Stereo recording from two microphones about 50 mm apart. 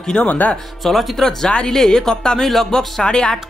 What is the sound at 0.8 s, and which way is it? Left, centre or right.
Speech, centre.